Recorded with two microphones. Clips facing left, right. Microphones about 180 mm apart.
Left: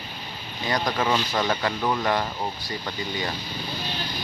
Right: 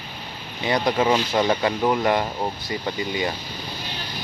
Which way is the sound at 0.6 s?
25° right (ahead or behind).